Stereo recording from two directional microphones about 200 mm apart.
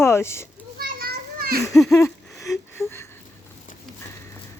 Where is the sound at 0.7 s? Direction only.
50° right (ahead or behind).